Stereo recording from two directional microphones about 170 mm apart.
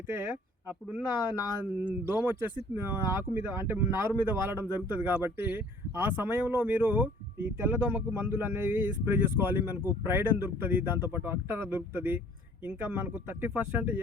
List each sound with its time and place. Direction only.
0.1 s speech: 10° right (ahead or behind)